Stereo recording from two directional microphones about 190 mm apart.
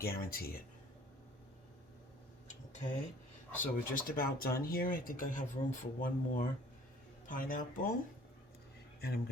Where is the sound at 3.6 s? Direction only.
45° left (ahead or behind).